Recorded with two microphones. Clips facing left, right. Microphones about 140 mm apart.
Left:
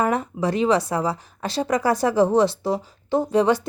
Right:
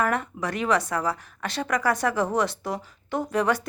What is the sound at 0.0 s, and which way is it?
Speech, 30° left (ahead or behind).